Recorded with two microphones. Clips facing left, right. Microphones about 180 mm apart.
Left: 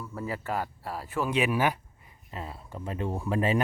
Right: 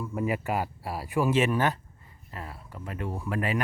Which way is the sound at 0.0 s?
15° right (ahead or behind).